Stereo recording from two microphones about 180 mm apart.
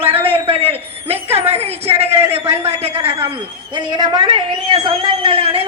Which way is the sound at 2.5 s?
35° right (ahead or behind).